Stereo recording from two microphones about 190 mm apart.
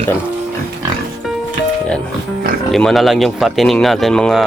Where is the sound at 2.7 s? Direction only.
Centre (ahead or behind).